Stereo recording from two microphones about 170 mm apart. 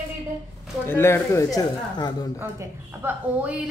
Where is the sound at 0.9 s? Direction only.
15° left (ahead or behind).